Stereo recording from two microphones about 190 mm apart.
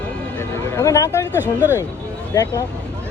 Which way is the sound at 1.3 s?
10° right (ahead or behind).